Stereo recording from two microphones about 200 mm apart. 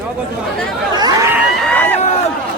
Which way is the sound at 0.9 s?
20° right (ahead or behind).